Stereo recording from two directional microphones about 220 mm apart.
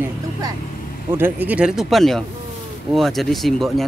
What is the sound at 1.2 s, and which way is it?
Speech, 10° right (ahead or behind).